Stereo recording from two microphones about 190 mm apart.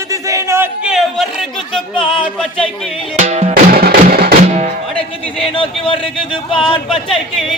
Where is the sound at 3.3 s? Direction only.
35° right (ahead or behind).